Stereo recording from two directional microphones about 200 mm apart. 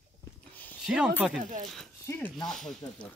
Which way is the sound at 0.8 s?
5° right (ahead or behind).